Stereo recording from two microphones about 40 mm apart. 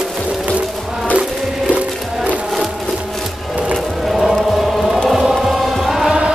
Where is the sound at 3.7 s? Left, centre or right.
Centre.